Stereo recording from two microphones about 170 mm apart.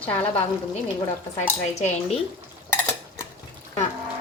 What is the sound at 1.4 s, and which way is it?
Speech, 40° left (ahead or behind).